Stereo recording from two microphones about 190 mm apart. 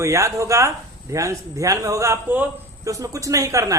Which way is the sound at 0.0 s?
15° right (ahead or behind).